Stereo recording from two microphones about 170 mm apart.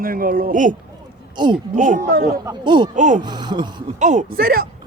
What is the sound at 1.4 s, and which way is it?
Speech, 25° right (ahead or behind).